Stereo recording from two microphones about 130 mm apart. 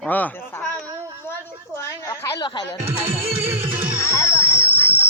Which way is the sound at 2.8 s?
15° right (ahead or behind).